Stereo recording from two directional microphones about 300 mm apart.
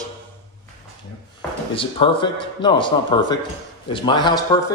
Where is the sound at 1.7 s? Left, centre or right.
Centre.